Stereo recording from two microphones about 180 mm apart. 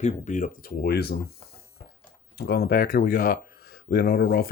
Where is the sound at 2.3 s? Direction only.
65° left (ahead or behind).